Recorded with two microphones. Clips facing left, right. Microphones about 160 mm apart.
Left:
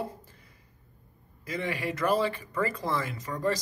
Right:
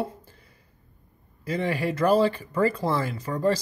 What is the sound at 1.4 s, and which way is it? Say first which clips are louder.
Speech: right 6 dB; 30° right (ahead or behind).